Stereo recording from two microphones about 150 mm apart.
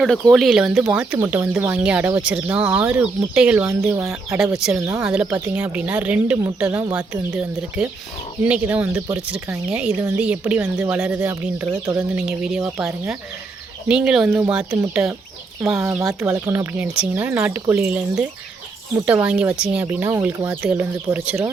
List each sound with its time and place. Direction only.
0.0 s speech: centre (ahead or behind)
13.8 s speech: 5° right (ahead or behind)
15.6 s speech: 5° right (ahead or behind)
16.0 s speech: 20° right (ahead or behind)